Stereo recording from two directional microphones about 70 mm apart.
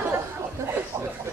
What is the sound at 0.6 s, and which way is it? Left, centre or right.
Chuckle, right.